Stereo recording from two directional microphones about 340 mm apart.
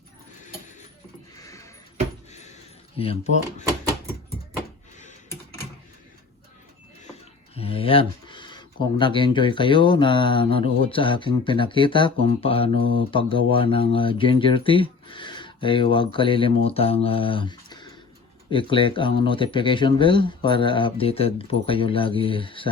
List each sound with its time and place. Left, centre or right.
1.4 s a sound: centre
3.0 s speech: centre
7.5 s speech: centre
12.7 s mantra: right
13.0 s speech: centre